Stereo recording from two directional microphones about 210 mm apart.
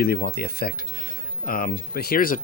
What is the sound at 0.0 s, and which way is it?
Speech, 45° left (ahead or behind).